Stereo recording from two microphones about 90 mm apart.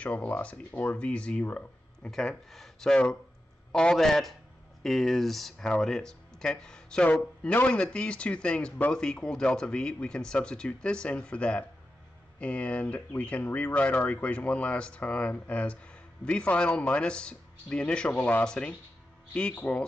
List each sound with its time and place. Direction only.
0.0 s speech: 15° left (ahead or behind)